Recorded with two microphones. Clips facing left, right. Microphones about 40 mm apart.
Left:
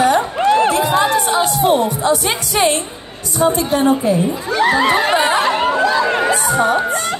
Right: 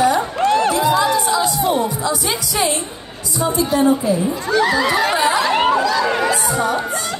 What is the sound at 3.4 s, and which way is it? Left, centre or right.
Speech, left.